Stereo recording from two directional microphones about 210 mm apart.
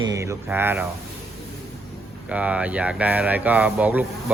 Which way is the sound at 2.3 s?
5° right (ahead or behind).